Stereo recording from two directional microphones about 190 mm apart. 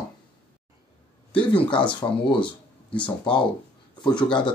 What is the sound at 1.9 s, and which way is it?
Speech, 25° left (ahead or behind).